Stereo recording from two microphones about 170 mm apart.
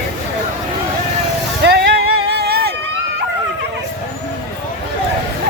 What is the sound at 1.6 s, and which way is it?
Music, 80° right.